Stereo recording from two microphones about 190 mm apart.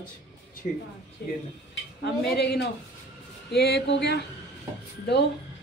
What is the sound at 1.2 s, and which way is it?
A woman's voice, 55° left (ahead or behind).